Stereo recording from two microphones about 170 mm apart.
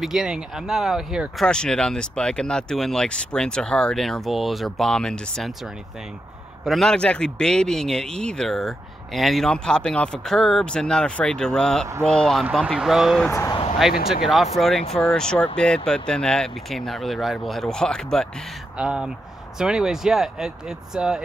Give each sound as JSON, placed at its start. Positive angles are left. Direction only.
{"t": 0.0, "sound": "speech", "side_deg": -5}
{"t": 6.6, "sound": "speech", "side_deg": 0}
{"t": 13.3, "sound": "speech", "side_deg": 15}
{"t": 13.8, "sound": "speech", "side_deg": 0}